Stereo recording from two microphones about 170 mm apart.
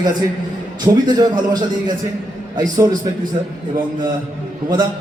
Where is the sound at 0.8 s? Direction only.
25° right (ahead or behind).